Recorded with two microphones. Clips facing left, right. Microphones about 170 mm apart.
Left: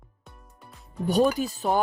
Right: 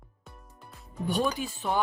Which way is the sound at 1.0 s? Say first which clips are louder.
Left 6 dB; 40° left (ahead or behind).